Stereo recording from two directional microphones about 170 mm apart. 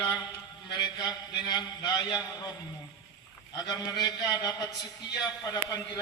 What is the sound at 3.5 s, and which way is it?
A man's voice, 25° left (ahead or behind).